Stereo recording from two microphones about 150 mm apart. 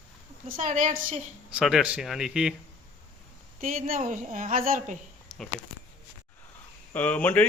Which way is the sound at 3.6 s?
65° right (ahead or behind).